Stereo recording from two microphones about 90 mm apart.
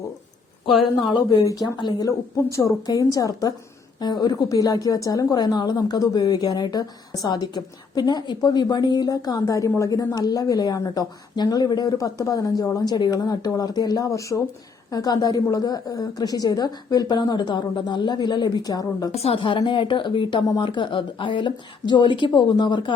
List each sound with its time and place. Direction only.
0.6 s speech: 65° left (ahead or behind)
1.5 s speech: 50° left (ahead or behind)
4.0 s a woman's voice: 50° left (ahead or behind)
19.3 s speech: 75° left (ahead or behind)
19.5 s speech: 65° left (ahead or behind)